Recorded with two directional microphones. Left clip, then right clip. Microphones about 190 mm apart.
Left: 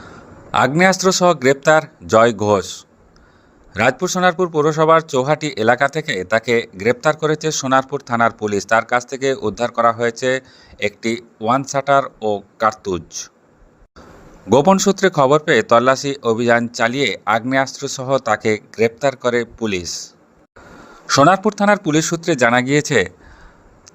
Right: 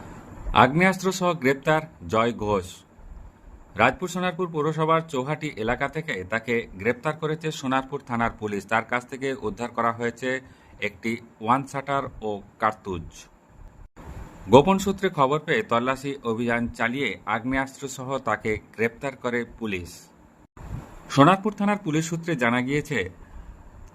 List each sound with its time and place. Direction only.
0.5 s speech: 25° left (ahead or behind)
3.8 s speech: 25° left (ahead or behind)
14.5 s speech: 25° left (ahead or behind)
17.7 s speech: 15° left (ahead or behind)
21.1 s speech: 25° left (ahead or behind)